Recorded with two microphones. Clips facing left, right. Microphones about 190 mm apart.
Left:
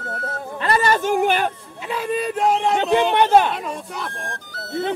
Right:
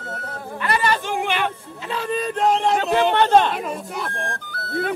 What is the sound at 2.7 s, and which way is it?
Speech, 15° left (ahead or behind).